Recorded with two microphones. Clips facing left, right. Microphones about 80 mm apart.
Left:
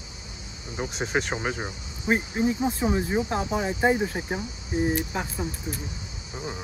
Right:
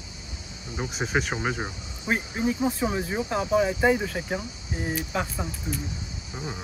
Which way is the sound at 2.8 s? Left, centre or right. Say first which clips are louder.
Left 3 dB; centre.